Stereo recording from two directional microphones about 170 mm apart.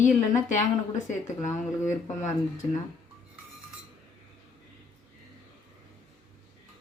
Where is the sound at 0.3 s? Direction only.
45° left (ahead or behind).